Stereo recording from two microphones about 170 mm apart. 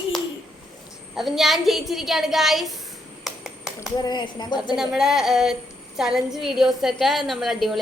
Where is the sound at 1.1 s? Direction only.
Centre (ahead or behind).